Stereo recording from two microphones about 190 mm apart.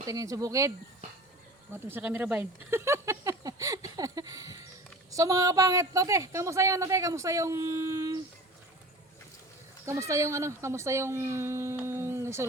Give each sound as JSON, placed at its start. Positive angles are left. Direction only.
{"t": 0.0, "sound": "speech", "side_deg": -15}
{"t": 1.7, "sound": "speech", "side_deg": -10}
{"t": 9.8, "sound": "speech", "side_deg": -15}